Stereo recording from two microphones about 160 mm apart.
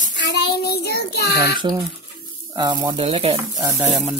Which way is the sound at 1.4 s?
25° right (ahead or behind).